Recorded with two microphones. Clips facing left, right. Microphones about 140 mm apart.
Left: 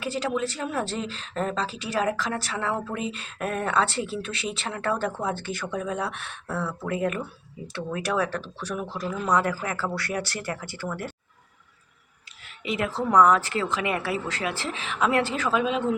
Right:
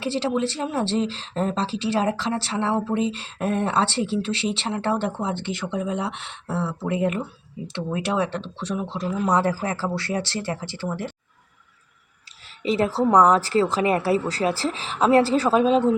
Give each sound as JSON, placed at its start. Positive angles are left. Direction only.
{"t": 0.0, "sound": "speech", "side_deg": -30}
{"t": 9.3, "sound": "speech", "side_deg": -30}
{"t": 12.6, "sound": "a woman's voice", "side_deg": -35}